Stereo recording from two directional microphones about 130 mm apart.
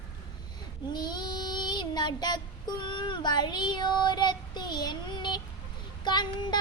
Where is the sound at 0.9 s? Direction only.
35° left (ahead or behind).